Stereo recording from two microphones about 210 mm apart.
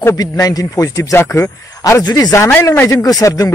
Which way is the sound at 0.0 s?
15° left (ahead or behind).